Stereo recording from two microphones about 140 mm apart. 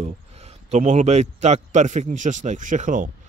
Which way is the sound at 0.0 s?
50° right (ahead or behind).